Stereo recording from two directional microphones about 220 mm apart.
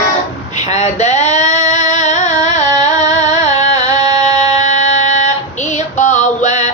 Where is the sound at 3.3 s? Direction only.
35° left (ahead or behind).